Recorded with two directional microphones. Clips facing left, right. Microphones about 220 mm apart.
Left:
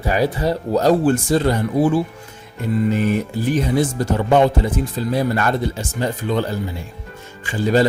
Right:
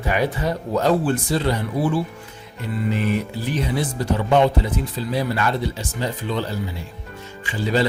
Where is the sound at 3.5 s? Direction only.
45° left (ahead or behind).